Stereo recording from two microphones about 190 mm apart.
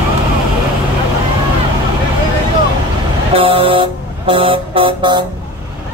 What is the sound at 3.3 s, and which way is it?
Buzzer, 30° right (ahead or behind).